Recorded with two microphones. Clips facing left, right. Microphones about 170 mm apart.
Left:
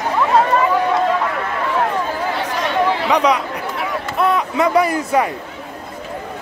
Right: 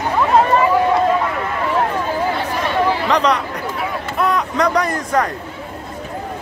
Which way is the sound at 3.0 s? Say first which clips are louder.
Left 1 dB; 10° left (ahead or behind).